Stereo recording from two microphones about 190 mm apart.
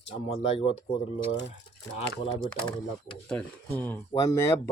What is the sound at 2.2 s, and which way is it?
Speech, 25° left (ahead or behind).